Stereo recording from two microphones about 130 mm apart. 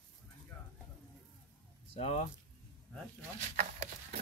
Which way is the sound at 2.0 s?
50° left (ahead or behind).